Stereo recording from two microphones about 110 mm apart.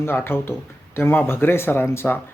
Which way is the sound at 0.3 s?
20° left (ahead or behind).